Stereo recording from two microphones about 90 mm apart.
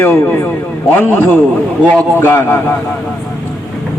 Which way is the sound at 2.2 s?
25° left (ahead or behind).